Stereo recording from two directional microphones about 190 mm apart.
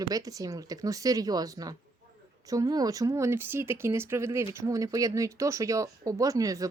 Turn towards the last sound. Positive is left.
turn(degrees=-15)  # may be behind; listen again after turning